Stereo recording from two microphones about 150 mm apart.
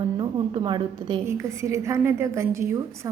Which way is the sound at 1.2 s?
20° right (ahead or behind).